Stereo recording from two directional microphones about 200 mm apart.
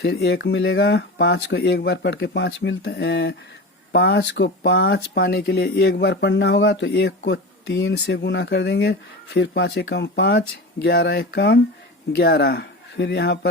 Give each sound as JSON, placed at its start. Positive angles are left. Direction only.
{"t": 0.0, "sound": "speech", "side_deg": 55}